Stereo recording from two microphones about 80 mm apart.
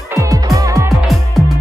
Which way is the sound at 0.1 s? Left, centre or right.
Right.